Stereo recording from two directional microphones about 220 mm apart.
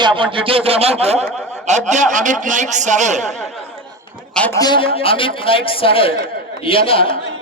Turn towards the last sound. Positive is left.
turn(degrees=25)  # may be behind; listen again after turning